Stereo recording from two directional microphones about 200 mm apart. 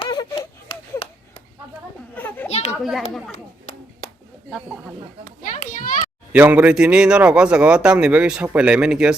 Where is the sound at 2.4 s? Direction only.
30° left (ahead or behind).